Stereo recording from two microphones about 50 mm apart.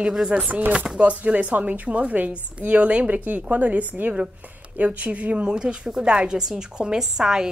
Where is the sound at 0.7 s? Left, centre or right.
Centre.